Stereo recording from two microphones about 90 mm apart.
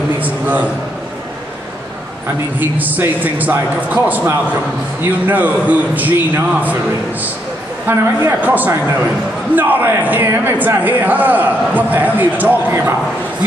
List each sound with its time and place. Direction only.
0.2 s a sound: 20° right (ahead or behind)
2.8 s a man's voice: 20° right (ahead or behind)
7.8 s a man's voice: 20° right (ahead or behind)